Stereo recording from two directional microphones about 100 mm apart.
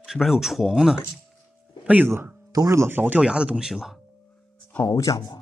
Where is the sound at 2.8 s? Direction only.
20° right (ahead or behind); by 4.0 s 5° right (ahead or behind).